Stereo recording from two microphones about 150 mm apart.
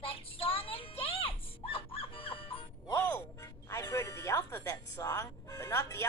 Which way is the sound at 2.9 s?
15° left (ahead or behind).